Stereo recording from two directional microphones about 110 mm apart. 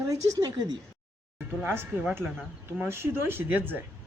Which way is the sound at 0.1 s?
35° right (ahead or behind).